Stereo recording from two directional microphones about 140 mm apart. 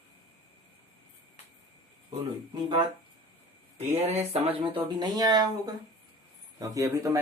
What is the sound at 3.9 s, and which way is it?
A man's voice, 50° right (ahead or behind).